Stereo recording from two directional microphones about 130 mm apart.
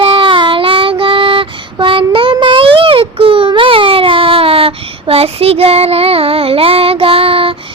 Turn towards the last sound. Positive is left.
turn(degrees=-45)  # may be behind; listen again after turning